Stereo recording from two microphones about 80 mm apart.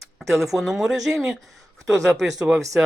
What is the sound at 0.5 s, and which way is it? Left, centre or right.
Speech, centre.